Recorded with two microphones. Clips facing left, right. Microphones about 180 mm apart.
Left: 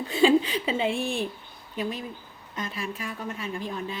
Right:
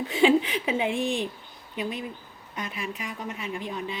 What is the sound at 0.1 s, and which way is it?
Speech, 20° right (ahead or behind).